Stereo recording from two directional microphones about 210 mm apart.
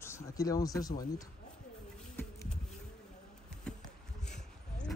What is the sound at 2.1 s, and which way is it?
Bee, 10° left (ahead or behind).